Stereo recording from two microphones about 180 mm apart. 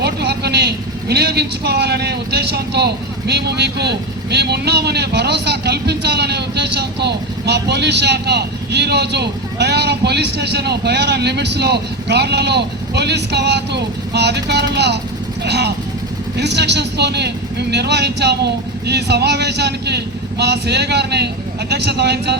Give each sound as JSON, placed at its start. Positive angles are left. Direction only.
{"t": 0.0, "sound": "speech", "side_deg": -65}